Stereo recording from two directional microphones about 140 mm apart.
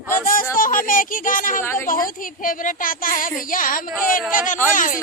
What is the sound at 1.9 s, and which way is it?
A woman's voice, 80° left.